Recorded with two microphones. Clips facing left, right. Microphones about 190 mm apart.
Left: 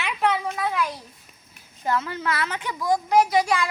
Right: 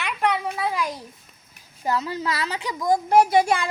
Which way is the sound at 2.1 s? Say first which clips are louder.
Even; 35° right (ahead or behind).